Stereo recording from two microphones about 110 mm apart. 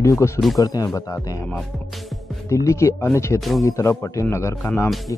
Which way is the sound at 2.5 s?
25° left (ahead or behind).